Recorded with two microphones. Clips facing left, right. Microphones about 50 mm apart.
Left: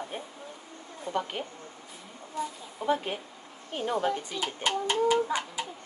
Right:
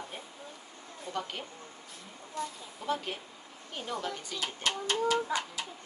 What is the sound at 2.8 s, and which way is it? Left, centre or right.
A woman's voice, left.